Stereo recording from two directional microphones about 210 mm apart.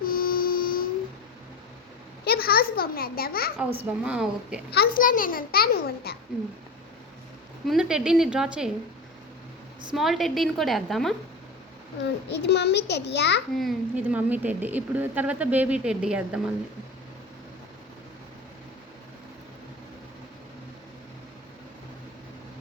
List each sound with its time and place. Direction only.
0.0 s a sound: 45° left (ahead or behind)
2.2 s a child's voice: 45° left (ahead or behind)
3.8 s a woman's voice: 5° right (ahead or behind)
4.7 s a child's voice: 45° left (ahead or behind)
7.7 s a woman's voice: 5° right (ahead or behind)
9.9 s a woman's voice: centre (ahead or behind)
12.3 s a child's voice: 55° left (ahead or behind)
13.6 s speech: 5° right (ahead or behind)